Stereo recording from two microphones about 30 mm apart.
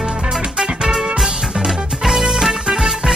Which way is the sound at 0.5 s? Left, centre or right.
Centre.